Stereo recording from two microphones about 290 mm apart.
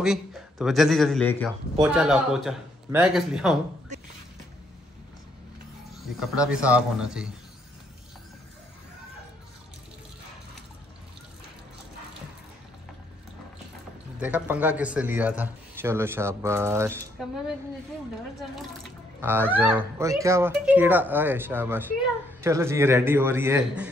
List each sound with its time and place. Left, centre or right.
0.0 s speech: centre
3.9 s a sound: right
5.9 s speech: centre
14.2 s speech: centre
18.6 s speech: centre